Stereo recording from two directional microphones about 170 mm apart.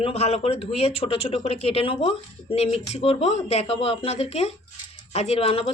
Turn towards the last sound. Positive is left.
turn(degrees=35)  # may be behind; listen again after turning